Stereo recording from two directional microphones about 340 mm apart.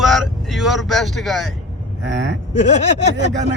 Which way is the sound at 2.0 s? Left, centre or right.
Right.